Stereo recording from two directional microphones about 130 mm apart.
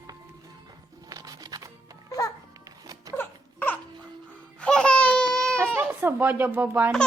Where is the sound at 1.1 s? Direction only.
30° right (ahead or behind).